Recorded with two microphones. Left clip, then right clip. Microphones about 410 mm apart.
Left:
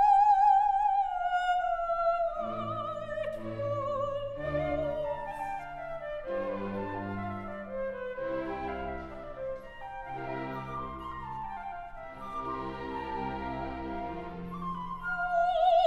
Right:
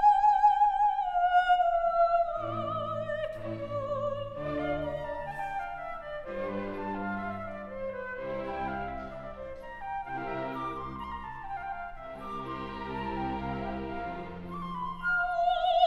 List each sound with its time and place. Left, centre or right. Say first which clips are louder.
0.0 s music: even; left
15.3 s music: left 5 dB; left